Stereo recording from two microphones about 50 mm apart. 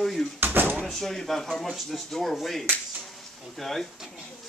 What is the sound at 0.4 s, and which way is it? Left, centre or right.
Door, right.